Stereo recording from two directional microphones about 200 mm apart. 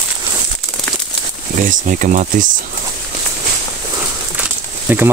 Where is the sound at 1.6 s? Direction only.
40° right (ahead or behind).